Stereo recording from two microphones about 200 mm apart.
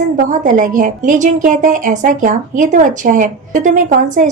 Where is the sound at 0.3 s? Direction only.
40° right (ahead or behind).